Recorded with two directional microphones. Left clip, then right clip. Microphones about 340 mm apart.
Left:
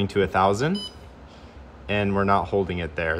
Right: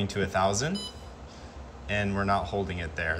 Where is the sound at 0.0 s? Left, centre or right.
Centre.